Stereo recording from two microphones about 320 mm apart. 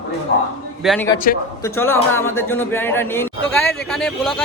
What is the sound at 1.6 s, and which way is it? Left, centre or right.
A man's voice, centre.